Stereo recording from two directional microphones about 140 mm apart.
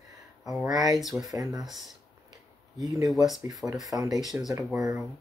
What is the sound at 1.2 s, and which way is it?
Speech, 25° right (ahead or behind).